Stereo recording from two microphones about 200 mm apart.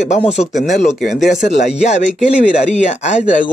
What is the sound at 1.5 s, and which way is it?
Speech, 35° left (ahead or behind).